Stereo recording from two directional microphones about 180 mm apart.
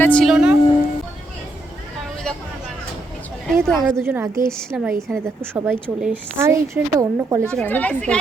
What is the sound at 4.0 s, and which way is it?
A woman's voice, 15° right (ahead or behind).